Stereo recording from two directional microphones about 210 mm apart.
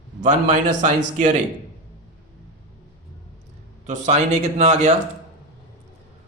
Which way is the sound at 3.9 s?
35° right (ahead or behind).